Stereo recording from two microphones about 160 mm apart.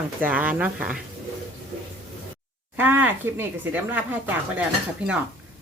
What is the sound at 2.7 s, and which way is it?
Speech, 10° right (ahead or behind).